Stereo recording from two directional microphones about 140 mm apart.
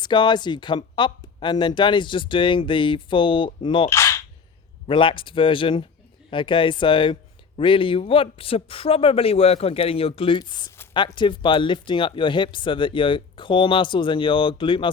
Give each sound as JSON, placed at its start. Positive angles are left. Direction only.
{"t": 0.0, "sound": "speech", "side_deg": 35}
{"t": 3.8, "sound": "cap gun", "side_deg": 20}
{"t": 4.9, "sound": "speech", "side_deg": 40}